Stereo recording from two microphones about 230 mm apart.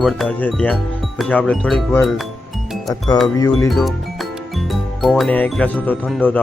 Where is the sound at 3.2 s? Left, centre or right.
Centre.